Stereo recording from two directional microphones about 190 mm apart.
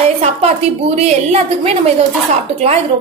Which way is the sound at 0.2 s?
35° right (ahead or behind).